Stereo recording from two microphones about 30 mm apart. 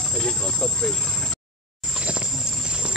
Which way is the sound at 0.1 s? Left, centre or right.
Left.